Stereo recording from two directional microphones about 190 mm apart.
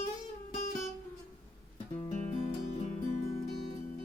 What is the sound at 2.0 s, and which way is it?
Guitar, 40° left (ahead or behind).